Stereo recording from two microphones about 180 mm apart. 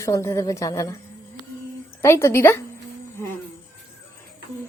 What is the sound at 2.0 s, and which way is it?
Speech, 15° left (ahead or behind).